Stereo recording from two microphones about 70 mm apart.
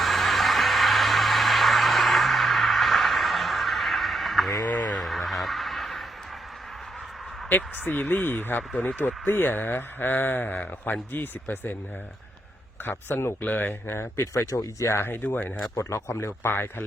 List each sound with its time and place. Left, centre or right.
0.0 s vehicle: centre
4.9 s a sound: centre
7.5 s speech: left
12.8 s speech: left
14.3 s speech: left
14.9 s speech: left
15.7 s speech: left